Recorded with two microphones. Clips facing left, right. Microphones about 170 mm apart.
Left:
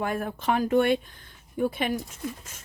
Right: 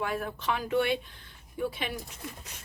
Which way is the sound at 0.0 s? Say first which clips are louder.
Left 4 dB; 50° left (ahead or behind).